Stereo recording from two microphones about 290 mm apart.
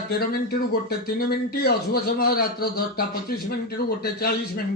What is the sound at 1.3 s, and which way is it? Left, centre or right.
A man's voice, left.